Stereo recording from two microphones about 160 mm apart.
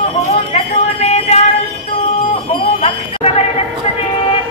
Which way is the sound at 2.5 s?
40° left (ahead or behind).